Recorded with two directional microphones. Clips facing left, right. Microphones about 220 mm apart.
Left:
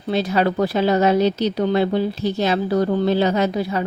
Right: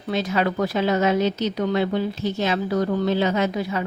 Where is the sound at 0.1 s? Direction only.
35° left (ahead or behind).